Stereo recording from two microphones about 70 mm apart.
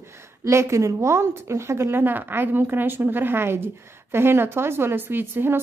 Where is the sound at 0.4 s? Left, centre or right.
Right.